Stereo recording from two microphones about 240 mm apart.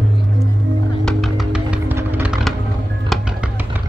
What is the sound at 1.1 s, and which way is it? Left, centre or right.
Music, centre.